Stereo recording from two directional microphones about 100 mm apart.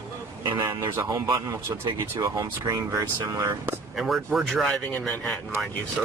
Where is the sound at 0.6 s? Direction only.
40° right (ahead or behind).